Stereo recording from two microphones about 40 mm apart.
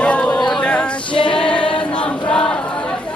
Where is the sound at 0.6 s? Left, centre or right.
Left.